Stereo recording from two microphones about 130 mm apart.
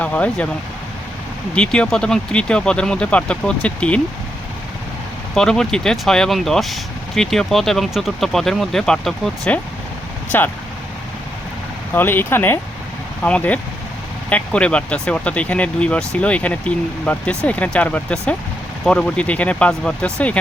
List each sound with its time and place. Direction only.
0.0 s speech: 10° left (ahead or behind)
1.5 s speech: 10° left (ahead or behind)
5.3 s speech: 5° left (ahead or behind)
10.3 s speech: 15° left (ahead or behind)
11.9 s speech: 15° left (ahead or behind)